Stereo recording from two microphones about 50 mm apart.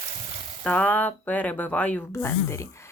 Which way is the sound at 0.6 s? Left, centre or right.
Left.